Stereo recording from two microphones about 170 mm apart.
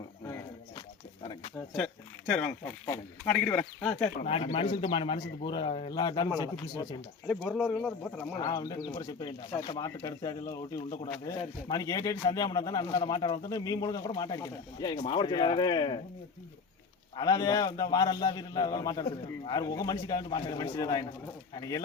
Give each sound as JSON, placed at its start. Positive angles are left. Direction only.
{"t": 2.3, "sound": "a man's voice", "side_deg": 10}
{"t": 4.2, "sound": "speech", "side_deg": 35}
{"t": 7.3, "sound": "speech", "side_deg": 5}
{"t": 8.4, "sound": "speech", "side_deg": 20}
{"t": 17.2, "sound": "speech", "side_deg": 25}